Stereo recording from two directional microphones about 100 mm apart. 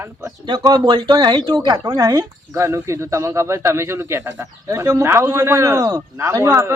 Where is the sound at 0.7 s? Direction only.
50° right (ahead or behind).